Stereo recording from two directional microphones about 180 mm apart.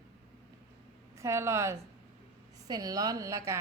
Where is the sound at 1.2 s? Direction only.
15° right (ahead or behind).